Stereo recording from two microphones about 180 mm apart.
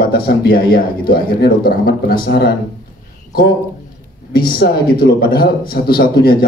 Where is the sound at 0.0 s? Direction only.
60° left (ahead or behind).